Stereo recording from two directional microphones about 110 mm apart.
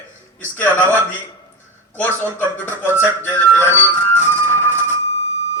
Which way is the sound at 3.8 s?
20° left (ahead or behind).